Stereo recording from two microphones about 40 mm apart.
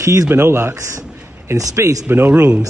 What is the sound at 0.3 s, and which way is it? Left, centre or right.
Speech, right.